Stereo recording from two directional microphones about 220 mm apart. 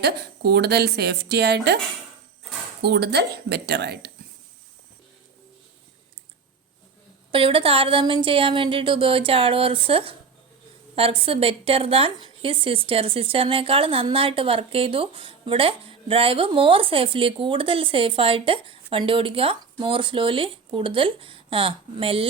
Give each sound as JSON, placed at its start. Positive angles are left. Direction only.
{"t": 0.0, "sound": "a woman's voice", "side_deg": -50}
{"t": 2.8, "sound": "a woman's voice", "side_deg": -50}
{"t": 7.3, "sound": "a woman's voice", "side_deg": -25}